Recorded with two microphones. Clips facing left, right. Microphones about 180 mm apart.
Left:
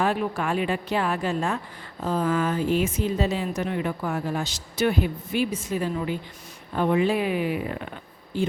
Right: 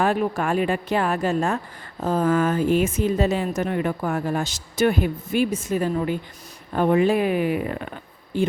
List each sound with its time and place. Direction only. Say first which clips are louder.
0.0 s a woman's voice: right 3 dB; 45° right (ahead or behind)